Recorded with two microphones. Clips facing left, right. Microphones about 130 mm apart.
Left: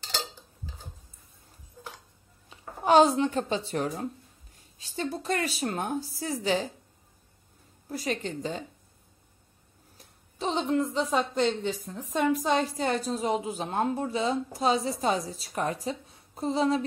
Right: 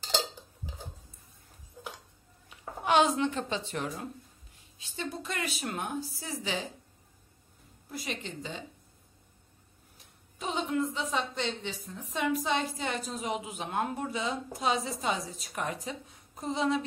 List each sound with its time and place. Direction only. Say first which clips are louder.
2.5 s a woman's voice: left 5 dB; 35° left (ahead or behind)
7.9 s a woman's voice: left 7 dB; 40° left (ahead or behind)
10.4 s a woman's voice: left 4 dB; 30° left (ahead or behind)